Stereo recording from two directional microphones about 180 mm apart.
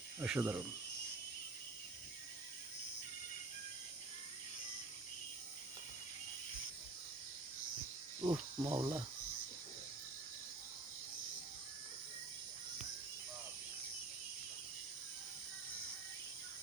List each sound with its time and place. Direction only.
0.2 s speech: 10° right (ahead or behind)
8.2 s cricket: 25° right (ahead or behind)